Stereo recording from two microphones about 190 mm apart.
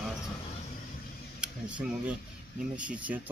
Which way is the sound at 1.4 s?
5° right (ahead or behind).